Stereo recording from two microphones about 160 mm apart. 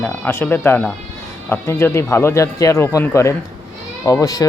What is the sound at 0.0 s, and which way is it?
A woman's voice, 15° left (ahead or behind).